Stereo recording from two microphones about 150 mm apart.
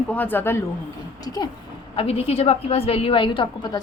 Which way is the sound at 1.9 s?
40° left (ahead or behind).